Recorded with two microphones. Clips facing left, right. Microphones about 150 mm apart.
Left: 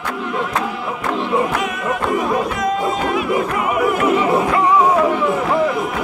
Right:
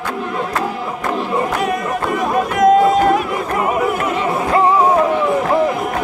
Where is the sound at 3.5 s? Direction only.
40° right (ahead or behind).